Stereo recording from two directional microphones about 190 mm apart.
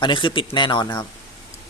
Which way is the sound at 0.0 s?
25° left (ahead or behind).